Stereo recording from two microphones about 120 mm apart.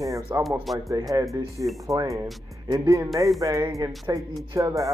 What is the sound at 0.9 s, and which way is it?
Speech, 30° right (ahead or behind).